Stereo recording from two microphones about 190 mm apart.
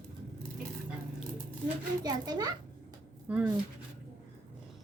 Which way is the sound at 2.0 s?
20° right (ahead or behind).